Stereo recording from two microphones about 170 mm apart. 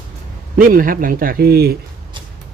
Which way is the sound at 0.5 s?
55° right (ahead or behind).